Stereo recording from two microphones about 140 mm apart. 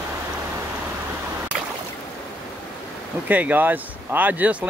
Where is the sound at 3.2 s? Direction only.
10° right (ahead or behind).